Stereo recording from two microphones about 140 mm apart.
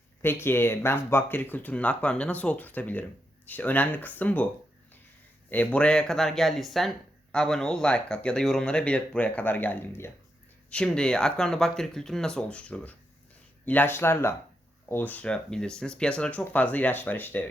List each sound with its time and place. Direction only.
0.2 s speech: 15° left (ahead or behind)
5.5 s speech: 10° left (ahead or behind)